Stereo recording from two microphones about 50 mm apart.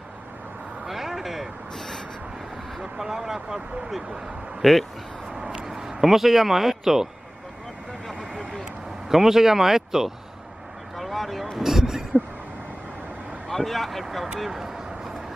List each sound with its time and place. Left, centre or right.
0.8 s a sound: centre
2.8 s speech: centre
4.6 s speech: centre
5.3 s vehicle: centre
5.7 s speech: centre
9.1 s speech: centre
11.0 s vehicle: centre
11.5 s a sound: centre
13.5 s speech: centre
14.4 s vehicle: centre